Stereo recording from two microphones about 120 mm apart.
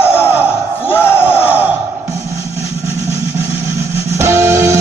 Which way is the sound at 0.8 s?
20° left (ahead or behind).